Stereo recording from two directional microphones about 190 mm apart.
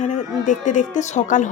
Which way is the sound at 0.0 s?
40° left (ahead or behind).